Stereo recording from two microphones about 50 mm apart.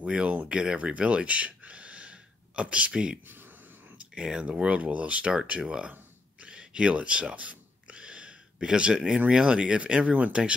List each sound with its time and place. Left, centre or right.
0.0 s speech: right
5.3 s speech: centre
6.4 s owl: centre
9.3 s speech: centre
10.4 s speech: centre